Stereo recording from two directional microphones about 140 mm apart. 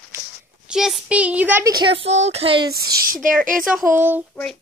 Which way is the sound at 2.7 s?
90° right.